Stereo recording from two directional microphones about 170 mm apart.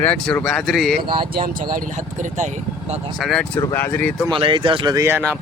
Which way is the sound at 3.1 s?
Centre (ahead or behind).